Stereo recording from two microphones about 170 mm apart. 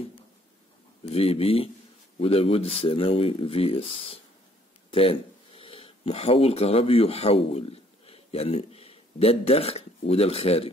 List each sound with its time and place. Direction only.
1.0 s speech: 35° left (ahead or behind)
5.6 s speech: 35° left (ahead or behind)